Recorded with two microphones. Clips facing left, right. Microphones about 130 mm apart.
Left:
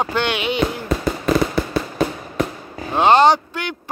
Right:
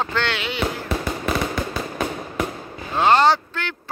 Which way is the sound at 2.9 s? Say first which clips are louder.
Left 3 dB; 20° left (ahead or behind).